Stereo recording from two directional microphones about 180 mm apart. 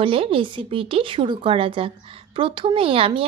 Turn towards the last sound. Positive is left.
turn(degrees=-30)  # may be behind; listen again after turning